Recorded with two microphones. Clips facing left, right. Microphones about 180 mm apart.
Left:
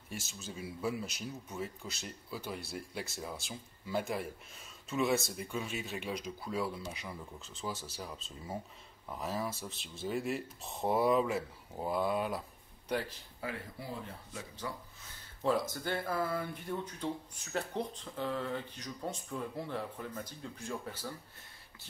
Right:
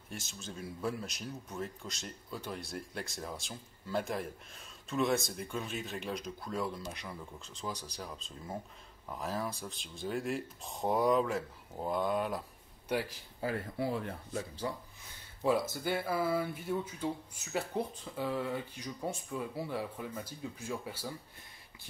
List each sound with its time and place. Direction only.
0.1 s speech: 5° left (ahead or behind)
13.4 s speech: 30° right (ahead or behind)
14.6 s speech: 30° right (ahead or behind)
15.4 s speech: 10° right (ahead or behind)